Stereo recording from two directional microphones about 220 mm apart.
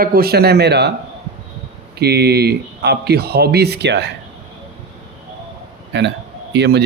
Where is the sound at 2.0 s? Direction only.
45° right (ahead or behind).